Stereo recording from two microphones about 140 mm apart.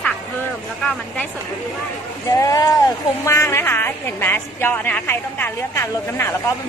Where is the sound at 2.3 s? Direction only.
25° left (ahead or behind).